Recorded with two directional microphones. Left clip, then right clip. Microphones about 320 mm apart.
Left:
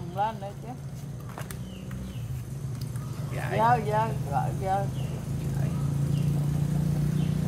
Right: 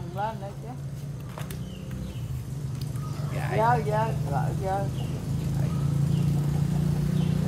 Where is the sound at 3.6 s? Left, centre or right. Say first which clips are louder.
Left 1 dB; centre.